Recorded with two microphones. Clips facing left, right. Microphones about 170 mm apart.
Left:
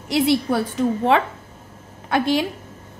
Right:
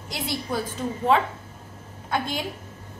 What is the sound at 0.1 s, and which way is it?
A woman's voice, 70° left (ahead or behind).